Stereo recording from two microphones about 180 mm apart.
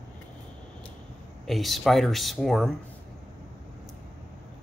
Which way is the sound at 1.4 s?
Centre (ahead or behind).